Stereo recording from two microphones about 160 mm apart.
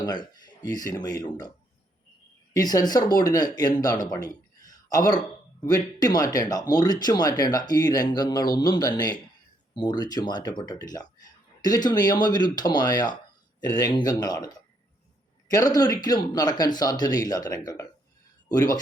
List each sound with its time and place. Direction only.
0.0 s speech: 25° left (ahead or behind)